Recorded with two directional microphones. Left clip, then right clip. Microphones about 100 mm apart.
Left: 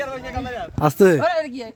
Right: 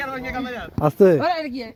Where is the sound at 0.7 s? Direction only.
55° left (ahead or behind); by 1.7 s 40° left (ahead or behind).